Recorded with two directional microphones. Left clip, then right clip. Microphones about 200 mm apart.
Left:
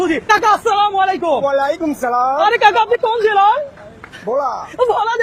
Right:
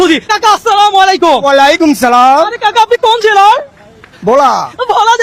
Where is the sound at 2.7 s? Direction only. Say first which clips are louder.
Right 7 dB; 35° right (ahead or behind).